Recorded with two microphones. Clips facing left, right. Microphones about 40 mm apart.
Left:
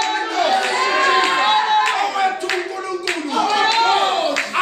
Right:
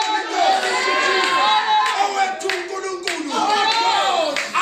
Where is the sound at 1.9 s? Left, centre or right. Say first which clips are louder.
Left 1 dB; centre.